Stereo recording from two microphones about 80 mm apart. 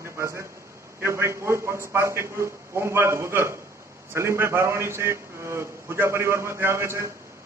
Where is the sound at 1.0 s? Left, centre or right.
Right.